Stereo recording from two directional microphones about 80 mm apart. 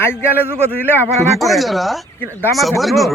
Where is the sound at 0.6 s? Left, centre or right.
Right.